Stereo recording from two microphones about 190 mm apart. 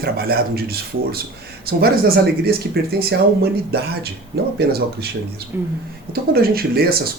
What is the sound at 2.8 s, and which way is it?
Speech, 55° right (ahead or behind).